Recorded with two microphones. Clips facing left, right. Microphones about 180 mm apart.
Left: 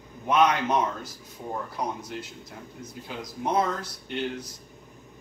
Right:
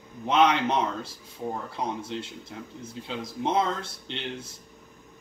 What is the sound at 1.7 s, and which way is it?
Speech, 25° right (ahead or behind).